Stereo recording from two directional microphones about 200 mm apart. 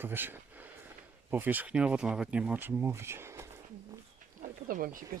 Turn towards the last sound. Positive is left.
turn(degrees=-45)  # may be behind; listen again after turning